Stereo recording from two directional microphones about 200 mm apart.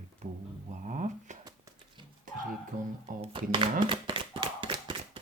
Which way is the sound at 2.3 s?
40° right (ahead or behind).